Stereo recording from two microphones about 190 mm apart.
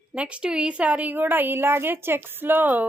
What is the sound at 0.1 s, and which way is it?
A woman's voice, 5° right (ahead or behind).